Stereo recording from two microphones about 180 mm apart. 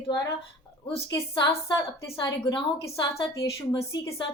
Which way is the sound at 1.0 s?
20° left (ahead or behind).